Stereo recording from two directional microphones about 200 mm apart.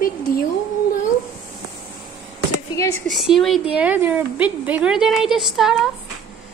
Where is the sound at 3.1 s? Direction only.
Centre (ahead or behind).